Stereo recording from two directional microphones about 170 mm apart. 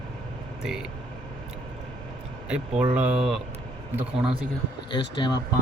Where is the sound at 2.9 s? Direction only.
10° right (ahead or behind).